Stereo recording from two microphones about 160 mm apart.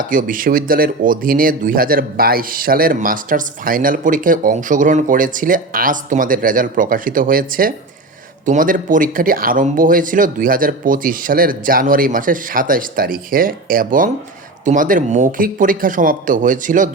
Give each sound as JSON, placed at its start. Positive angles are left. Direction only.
{"t": 0.0, "sound": "speech", "side_deg": -60}